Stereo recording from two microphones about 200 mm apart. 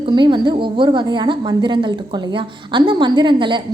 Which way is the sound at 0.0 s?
25° right (ahead or behind).